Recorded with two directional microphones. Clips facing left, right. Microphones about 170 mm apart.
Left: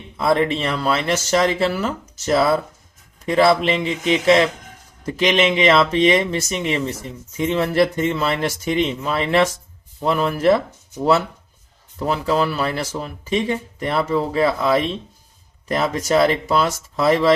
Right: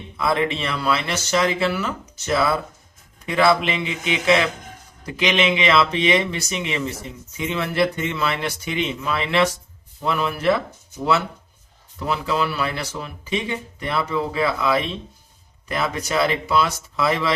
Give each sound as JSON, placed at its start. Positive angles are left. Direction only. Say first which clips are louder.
{"t": 0.2, "sound": "speech", "louder": "left 4 dB", "side_deg": 35}
{"t": 11.9, "sound": "speech", "louder": "left 4 dB", "side_deg": 40}